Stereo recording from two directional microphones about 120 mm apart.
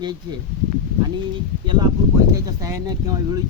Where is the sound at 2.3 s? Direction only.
30° right (ahead or behind).